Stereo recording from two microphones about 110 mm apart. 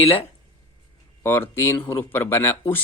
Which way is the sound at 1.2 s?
25° left (ahead or behind).